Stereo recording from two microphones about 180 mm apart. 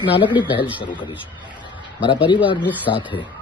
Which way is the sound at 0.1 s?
25° left (ahead or behind).